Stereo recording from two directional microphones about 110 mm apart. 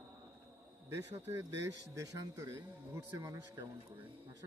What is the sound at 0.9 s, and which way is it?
Speech, 25° right (ahead or behind).